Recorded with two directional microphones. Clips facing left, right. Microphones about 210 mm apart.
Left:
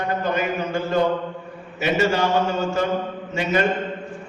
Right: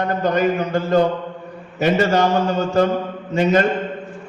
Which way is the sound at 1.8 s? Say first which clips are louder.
Right 3 dB; 40° right (ahead or behind).